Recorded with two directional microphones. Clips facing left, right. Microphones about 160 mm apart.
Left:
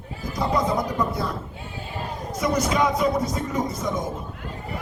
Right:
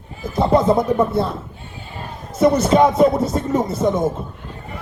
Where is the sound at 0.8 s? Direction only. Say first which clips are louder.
Right 8 dB; 25° right (ahead or behind).